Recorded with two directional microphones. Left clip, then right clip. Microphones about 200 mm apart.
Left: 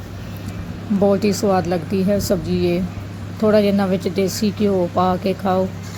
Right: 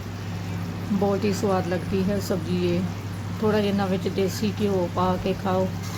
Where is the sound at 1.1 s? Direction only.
25° left (ahead or behind).